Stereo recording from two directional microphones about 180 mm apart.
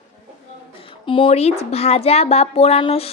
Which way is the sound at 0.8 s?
30° left (ahead or behind).